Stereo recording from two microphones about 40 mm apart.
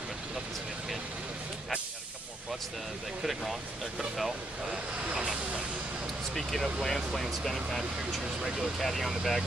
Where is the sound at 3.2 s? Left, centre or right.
Centre.